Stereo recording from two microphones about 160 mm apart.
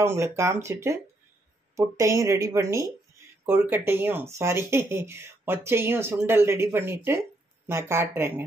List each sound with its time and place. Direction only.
0.0 s speech: 15° right (ahead or behind)